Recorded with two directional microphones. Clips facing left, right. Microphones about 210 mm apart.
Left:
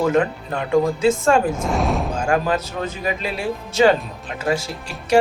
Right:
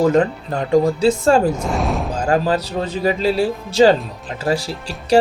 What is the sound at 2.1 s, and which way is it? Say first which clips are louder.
Speech: right 5 dB; 35° right (ahead or behind).